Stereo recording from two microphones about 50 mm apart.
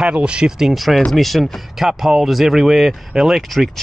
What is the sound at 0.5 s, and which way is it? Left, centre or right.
Speech, centre.